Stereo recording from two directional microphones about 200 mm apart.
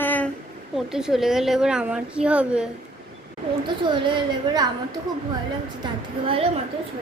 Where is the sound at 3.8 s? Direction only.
25° right (ahead or behind).